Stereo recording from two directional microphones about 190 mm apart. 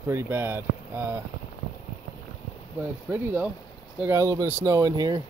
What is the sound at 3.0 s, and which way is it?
Speech, 5° right (ahead or behind).